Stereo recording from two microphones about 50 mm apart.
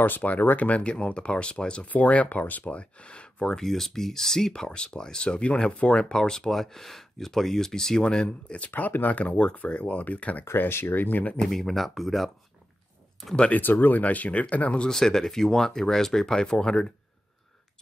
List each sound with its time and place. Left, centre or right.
0.0 s speech: left; by 1.9 s centre
1.9 s speech: left
10.7 s speech: left
11.0 s speech: left
11.4 s speech: centre
13.5 s speech: left
14.9 s speech: centre